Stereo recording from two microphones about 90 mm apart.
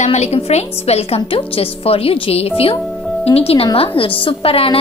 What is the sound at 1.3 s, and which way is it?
A woman's voice, 90° left.